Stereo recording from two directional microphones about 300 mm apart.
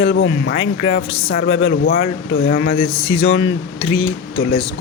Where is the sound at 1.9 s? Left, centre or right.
Left.